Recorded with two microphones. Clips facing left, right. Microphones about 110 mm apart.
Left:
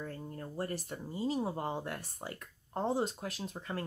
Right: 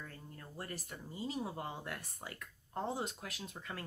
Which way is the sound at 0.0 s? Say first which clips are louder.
Left 9 dB; 35° left (ahead or behind).